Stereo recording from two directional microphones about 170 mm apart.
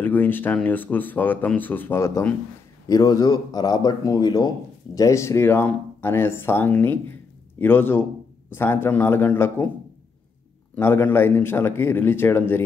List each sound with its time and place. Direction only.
0.0 s speech: 10° left (ahead or behind)
10.8 s speech: 10° left (ahead or behind)